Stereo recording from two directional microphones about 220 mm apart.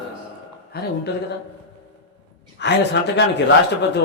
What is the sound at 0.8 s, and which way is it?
Speech, 45° left (ahead or behind).